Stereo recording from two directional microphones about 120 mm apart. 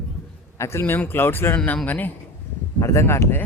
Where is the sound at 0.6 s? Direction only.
20° left (ahead or behind).